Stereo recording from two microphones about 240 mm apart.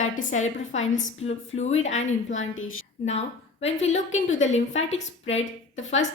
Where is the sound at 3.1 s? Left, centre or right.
Left.